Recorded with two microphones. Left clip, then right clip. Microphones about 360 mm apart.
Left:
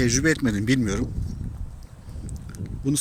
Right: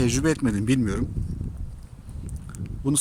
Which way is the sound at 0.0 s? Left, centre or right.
Centre.